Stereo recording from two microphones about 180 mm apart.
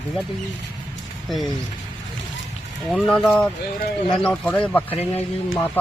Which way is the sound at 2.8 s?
5° left (ahead or behind).